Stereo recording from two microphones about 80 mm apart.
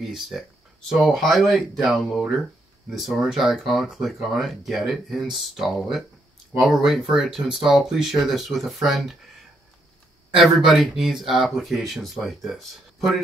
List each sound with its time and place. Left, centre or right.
0.0 s speech: centre
10.3 s speech: centre